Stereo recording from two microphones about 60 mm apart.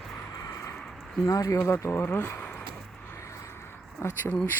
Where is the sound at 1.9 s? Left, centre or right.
Left.